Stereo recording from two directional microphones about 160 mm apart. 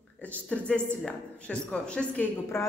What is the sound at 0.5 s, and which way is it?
A woman's voice, 5° left (ahead or behind).